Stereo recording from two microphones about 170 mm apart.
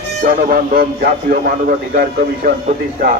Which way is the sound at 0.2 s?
55° right (ahead or behind).